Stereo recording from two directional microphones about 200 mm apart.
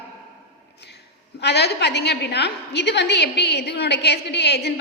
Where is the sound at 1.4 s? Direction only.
55° left (ahead or behind).